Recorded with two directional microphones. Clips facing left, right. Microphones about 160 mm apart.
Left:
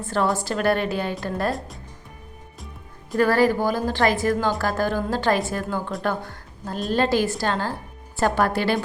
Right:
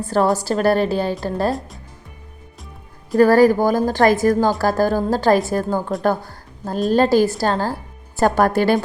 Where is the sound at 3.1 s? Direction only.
40° right (ahead or behind).